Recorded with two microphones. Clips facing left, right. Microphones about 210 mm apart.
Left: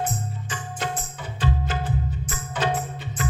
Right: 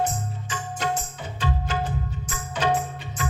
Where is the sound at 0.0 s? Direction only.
55° left (ahead or behind).